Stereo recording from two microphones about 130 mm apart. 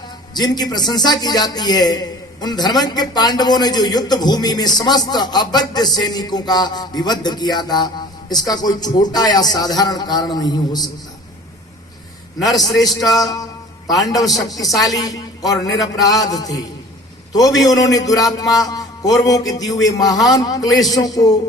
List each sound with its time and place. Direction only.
0.3 s a man's voice: 30° left (ahead or behind)
12.4 s a man's voice: centre (ahead or behind)
12.8 s a man's voice: 30° left (ahead or behind)